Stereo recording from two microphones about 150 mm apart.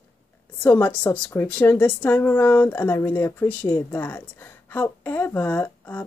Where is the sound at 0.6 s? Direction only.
10° left (ahead or behind).